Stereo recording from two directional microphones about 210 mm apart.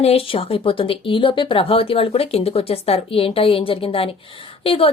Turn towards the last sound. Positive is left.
turn(degrees=25)  # may be behind; listen again after turning